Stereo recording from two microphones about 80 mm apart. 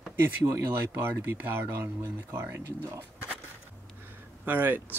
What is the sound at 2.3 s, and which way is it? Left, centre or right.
Speech, right.